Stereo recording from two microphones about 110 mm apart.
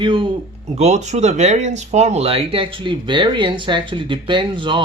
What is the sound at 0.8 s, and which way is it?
Speech, 90° right.